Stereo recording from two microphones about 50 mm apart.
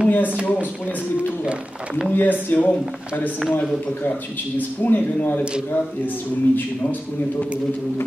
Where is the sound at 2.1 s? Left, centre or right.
Left.